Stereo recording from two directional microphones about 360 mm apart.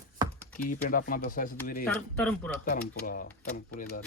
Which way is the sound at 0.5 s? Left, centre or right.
Left.